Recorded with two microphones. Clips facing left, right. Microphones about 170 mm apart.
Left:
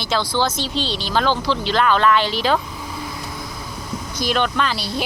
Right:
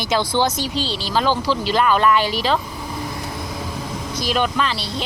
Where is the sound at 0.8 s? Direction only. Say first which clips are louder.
Even; 35° right (ahead or behind).